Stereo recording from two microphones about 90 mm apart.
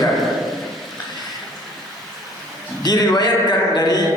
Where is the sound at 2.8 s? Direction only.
50° left (ahead or behind).